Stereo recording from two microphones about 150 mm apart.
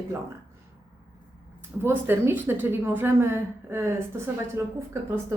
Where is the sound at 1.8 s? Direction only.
15° right (ahead or behind).